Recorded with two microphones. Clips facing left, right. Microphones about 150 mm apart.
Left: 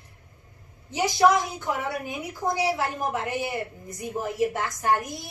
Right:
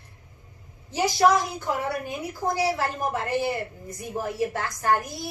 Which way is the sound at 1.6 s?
15° left (ahead or behind).